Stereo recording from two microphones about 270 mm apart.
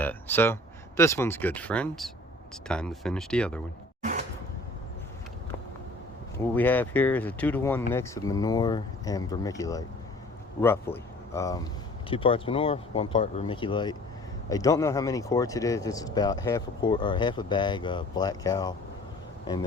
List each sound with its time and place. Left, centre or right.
0.0 s speech: centre
6.3 s speech: centre